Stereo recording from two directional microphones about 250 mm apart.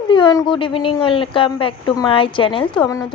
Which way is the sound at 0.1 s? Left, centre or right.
Centre.